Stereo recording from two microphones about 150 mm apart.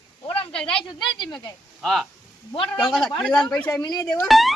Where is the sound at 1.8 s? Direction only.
Centre (ahead or behind).